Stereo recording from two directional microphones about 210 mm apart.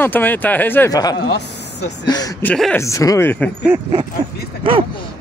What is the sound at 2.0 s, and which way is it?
Speech, 20° left (ahead or behind).